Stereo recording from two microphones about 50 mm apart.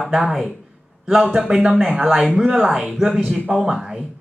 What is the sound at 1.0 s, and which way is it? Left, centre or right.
A man's voice, centre.